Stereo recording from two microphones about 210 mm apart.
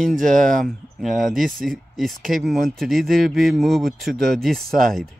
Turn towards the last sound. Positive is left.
turn(degrees=-45)  # may be behind; listen again after turning